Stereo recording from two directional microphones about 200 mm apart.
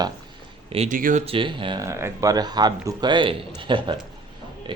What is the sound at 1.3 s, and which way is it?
Speech, 25° right (ahead or behind).